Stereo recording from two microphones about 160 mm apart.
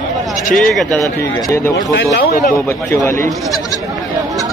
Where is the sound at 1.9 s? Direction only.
80° left.